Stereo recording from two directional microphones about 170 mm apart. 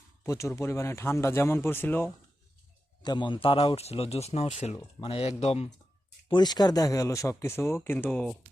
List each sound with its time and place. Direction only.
0.3 s speech: 15° left (ahead or behind)
3.0 s a man's voice: 25° left (ahead or behind)
6.2 s speech: 25° left (ahead or behind); by 8.4 s 5° left (ahead or behind)